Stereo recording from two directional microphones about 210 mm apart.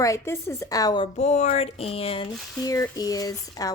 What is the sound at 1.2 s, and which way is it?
Speech, 35° left (ahead or behind).